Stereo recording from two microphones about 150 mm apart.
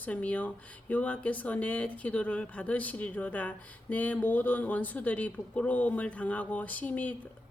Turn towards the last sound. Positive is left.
turn(degrees=10)  # may be behind; listen again after turning